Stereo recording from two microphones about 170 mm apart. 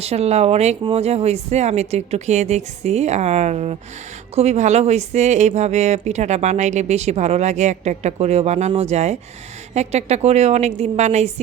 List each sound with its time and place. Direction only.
0.0 s speech: 40° right (ahead or behind)